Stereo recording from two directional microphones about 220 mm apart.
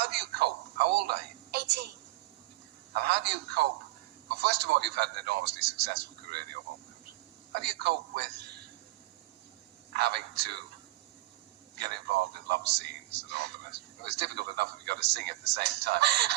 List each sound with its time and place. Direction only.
0.0 s a woman's voice: 50° right (ahead or behind)
2.9 s a man's voice: 50° right (ahead or behind)
7.5 s a man's voice: 50° right (ahead or behind)
9.9 s a man's voice: 50° right (ahead or behind)
12.5 s a man's voice: 50° right (ahead or behind)